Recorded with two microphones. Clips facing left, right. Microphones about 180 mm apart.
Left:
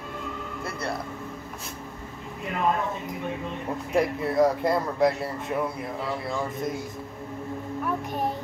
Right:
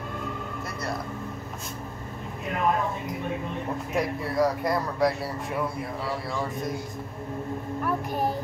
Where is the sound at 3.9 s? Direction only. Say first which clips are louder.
Left 4 dB; 25° left (ahead or behind).